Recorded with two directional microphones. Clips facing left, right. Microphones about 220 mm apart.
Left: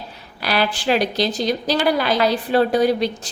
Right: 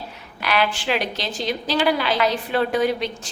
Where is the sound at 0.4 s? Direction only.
35° left (ahead or behind).